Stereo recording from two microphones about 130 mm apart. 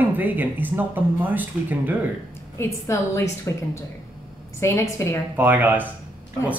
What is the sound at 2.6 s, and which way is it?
Speech, 20° left (ahead or behind).